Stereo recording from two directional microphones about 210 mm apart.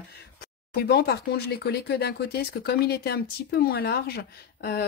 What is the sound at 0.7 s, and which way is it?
Speech, 50° left (ahead or behind).